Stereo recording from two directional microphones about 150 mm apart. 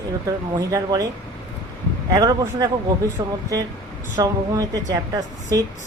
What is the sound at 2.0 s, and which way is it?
Speech, 25° right (ahead or behind).